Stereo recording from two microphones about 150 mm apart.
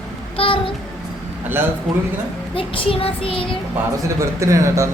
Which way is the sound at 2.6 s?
35° left (ahead or behind).